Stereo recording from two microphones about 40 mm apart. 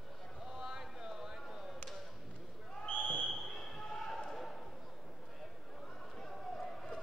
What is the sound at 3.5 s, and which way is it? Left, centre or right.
Basketball bounce, centre.